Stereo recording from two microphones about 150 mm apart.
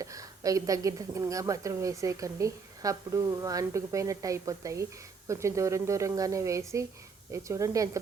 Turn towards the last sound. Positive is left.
turn(degrees=-20)  # may be behind; listen again after turning